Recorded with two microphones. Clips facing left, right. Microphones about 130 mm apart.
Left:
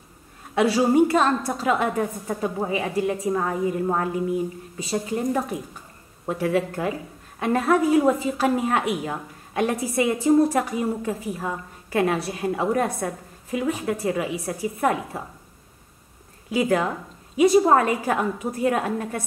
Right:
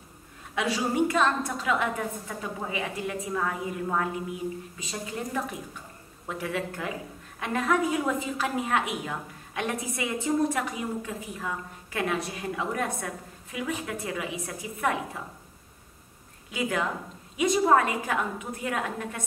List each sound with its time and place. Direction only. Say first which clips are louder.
0.6 s a woman's voice: left 8 dB; 35° left (ahead or behind)
16.5 s a woman's voice: left 7 dB; 35° left (ahead or behind)